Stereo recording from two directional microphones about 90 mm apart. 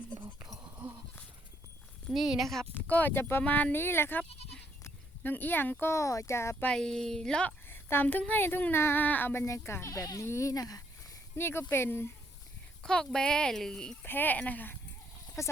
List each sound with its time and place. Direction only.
2.0 s speech: centre (ahead or behind)
2.9 s speech: 20° left (ahead or behind)
4.8 s livestock: 20° left (ahead or behind)
5.9 s speech: 35° left (ahead or behind)
6.7 s speech: 10° left (ahead or behind)
7.7 s a sound: 25° left (ahead or behind)
8.3 s speech: 25° left (ahead or behind); by 10.8 s 40° left (ahead or behind)
11.3 s speech: 25° left (ahead or behind)
12.8 s speech: 5° left (ahead or behind)
14.0 s speech: 20° left (ahead or behind)
15.4 s speech: 35° left (ahead or behind)